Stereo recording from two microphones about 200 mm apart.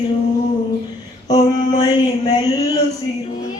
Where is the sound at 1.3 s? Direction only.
20° left (ahead or behind).